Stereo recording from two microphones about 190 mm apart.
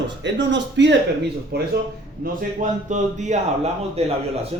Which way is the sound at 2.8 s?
40° right (ahead or behind).